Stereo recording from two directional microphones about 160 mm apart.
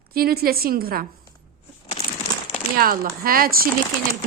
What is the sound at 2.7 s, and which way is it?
Speech, 65° right (ahead or behind).